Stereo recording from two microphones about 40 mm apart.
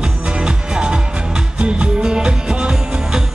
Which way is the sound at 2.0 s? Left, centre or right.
Centre.